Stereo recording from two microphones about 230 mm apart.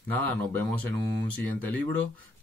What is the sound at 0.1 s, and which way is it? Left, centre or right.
Speech, centre.